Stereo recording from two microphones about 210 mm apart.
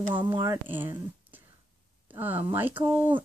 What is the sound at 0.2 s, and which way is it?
Speech, 20° right (ahead or behind).